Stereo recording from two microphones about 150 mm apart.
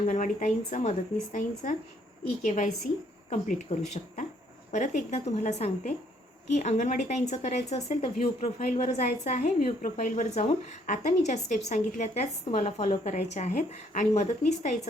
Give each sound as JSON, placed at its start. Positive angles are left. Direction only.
{"t": 0.1, "sound": "speech", "side_deg": 60}
{"t": 3.2, "sound": "a woman's voice", "side_deg": 50}
{"t": 8.5, "sound": "a woman's voice", "side_deg": 55}